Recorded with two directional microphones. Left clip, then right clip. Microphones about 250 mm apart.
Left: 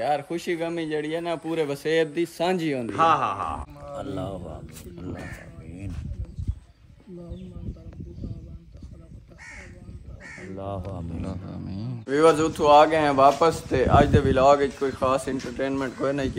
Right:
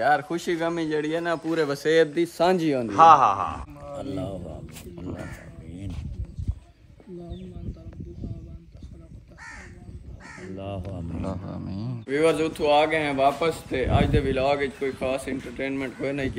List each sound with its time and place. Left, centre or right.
0.0 s a man's voice: centre
2.9 s a man's voice: right
4.1 s speech: centre
10.3 s crow: centre
10.9 s speech: centre